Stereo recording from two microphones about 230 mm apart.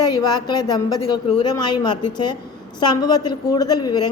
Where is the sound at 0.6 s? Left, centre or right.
Centre.